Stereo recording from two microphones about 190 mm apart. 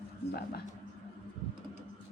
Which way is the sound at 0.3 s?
55° left (ahead or behind).